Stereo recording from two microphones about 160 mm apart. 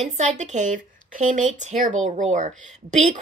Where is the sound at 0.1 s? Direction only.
45° right (ahead or behind).